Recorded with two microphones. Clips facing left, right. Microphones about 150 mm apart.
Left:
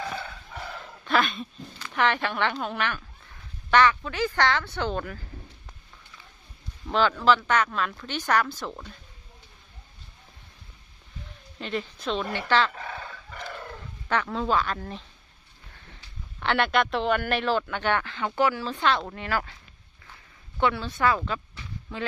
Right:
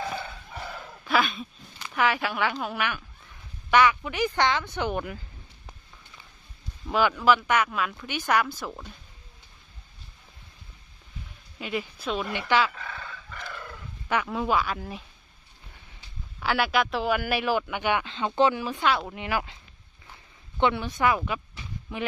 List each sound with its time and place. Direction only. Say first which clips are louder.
1.0 s a man's voice: even; 5° right (ahead or behind)
6.8 s a man's voice: even; 10° right (ahead or behind)
11.6 s a man's voice: even; 10° right (ahead or behind)
14.1 s a man's voice: even; 10° right (ahead or behind)
20.6 s speech: right 1 dB; 20° right (ahead or behind)